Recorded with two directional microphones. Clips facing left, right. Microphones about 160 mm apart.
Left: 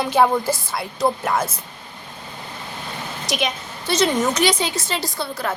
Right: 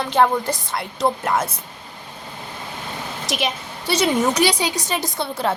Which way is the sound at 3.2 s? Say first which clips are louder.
Left 1 dB; 5° right (ahead or behind).